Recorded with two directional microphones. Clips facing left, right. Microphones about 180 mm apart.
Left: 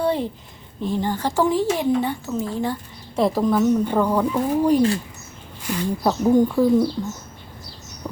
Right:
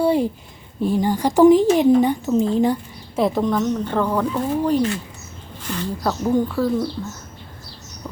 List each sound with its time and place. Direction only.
0.0 s a sound: 10° right (ahead or behind)
0.8 s speech: 10° right (ahead or behind)
3.2 s speech: centre (ahead or behind)
8.0 s bird: 15° left (ahead or behind)